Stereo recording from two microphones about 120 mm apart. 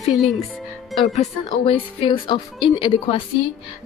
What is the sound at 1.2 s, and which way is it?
A woman's voice, 55° left (ahead or behind).